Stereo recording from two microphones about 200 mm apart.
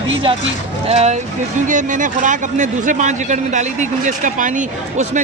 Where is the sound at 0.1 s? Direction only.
25° right (ahead or behind).